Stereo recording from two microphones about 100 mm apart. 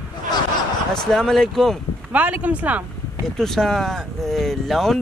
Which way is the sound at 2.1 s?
15° right (ahead or behind).